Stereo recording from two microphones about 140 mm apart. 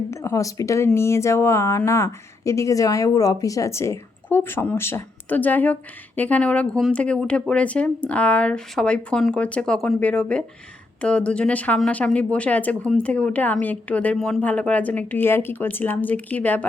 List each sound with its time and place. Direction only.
0.1 s speech: 20° left (ahead or behind)